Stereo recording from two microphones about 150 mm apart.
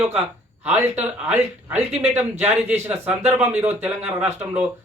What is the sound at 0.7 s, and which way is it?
Speech, 10° right (ahead or behind).